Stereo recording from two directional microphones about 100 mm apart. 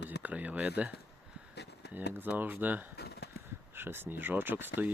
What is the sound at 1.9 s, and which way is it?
Speech, 20° right (ahead or behind).